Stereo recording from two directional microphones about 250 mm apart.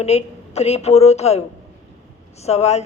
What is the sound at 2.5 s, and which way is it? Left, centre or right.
Speech, left.